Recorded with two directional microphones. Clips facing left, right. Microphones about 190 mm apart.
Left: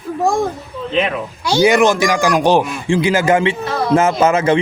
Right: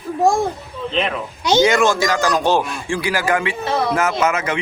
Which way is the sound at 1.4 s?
20° right (ahead or behind).